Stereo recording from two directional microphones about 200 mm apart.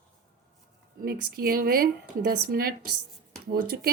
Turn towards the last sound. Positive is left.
turn(degrees=-50)  # may be behind; listen again after turning